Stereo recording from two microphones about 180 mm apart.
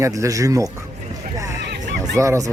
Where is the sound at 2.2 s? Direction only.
15° right (ahead or behind).